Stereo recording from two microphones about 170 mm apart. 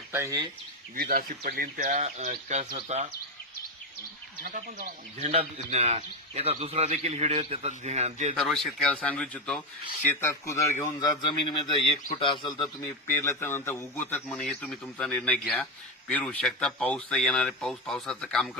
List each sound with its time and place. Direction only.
0.1 s speech: 20° right (ahead or behind)
0.9 s speech: 65° right (ahead or behind); by 3.1 s 40° right (ahead or behind)
4.4 s speech: 50° right (ahead or behind)
8.4 s a man's voice: centre (ahead or behind)
11.2 s speech: 30° left (ahead or behind)
12.8 s a man's voice: 15° left (ahead or behind)